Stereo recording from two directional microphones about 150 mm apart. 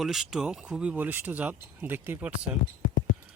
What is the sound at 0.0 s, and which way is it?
Speech, centre (ahead or behind).